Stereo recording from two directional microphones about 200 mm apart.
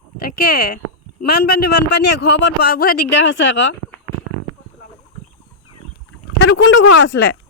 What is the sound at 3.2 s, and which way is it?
Speech, 70° left (ahead or behind).